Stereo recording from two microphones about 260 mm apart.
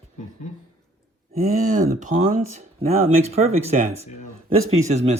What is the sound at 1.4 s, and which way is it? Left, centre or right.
Speech, right.